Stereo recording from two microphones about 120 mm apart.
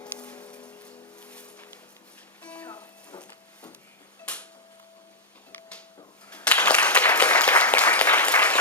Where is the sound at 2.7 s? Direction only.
30° left (ahead or behind).